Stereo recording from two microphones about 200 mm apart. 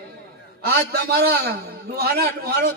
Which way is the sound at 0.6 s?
50° right (ahead or behind).